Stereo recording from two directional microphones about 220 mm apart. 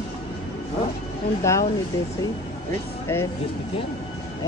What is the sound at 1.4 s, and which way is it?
Speech, 15° left (ahead or behind).